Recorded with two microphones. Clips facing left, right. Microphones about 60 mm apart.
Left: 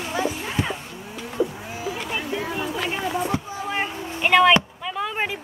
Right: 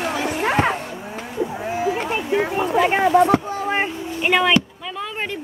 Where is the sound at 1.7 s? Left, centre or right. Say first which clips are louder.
Right 7 dB; right.